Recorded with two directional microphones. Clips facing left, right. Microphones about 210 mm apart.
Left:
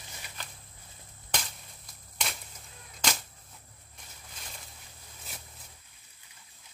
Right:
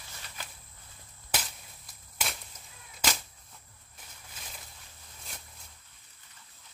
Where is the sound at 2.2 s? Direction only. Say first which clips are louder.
Even; 5° right (ahead or behind).